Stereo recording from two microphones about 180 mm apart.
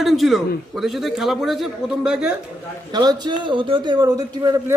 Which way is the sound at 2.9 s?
25° right (ahead or behind).